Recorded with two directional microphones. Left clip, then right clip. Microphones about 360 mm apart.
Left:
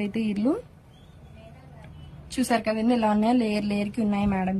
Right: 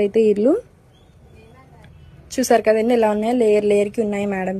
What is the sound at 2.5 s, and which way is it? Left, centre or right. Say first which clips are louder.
A woman's voice: right 10 dB; centre.